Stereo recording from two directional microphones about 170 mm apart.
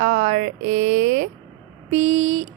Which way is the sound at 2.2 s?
40° right (ahead or behind).